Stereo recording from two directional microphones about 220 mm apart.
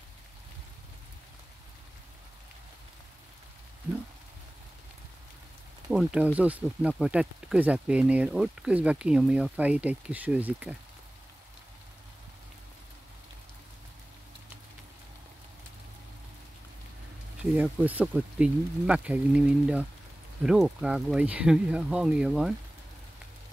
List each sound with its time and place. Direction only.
5.9 s speech: 5° right (ahead or behind)
17.4 s speech: 5° right (ahead or behind)